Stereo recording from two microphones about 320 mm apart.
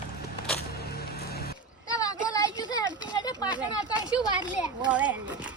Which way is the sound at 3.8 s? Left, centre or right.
Centre.